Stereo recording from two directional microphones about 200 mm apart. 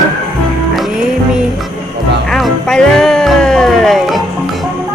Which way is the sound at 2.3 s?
Centre (ahead or behind).